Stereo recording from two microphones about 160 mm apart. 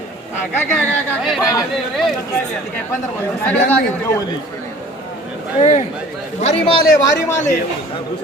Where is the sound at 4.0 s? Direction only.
15° left (ahead or behind).